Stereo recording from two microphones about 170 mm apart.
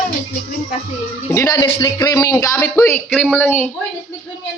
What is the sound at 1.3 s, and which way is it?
Speech, 15° left (ahead or behind).